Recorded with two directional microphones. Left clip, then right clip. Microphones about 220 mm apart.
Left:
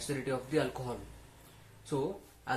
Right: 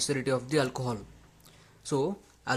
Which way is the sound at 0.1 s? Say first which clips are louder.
Right 2 dB; 50° right (ahead or behind).